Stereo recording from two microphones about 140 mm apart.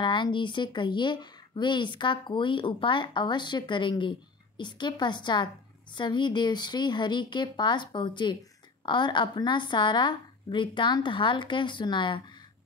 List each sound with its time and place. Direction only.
0.0 s speech: 35° left (ahead or behind)